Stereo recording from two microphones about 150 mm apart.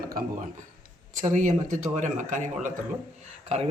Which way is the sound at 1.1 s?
55° right (ahead or behind).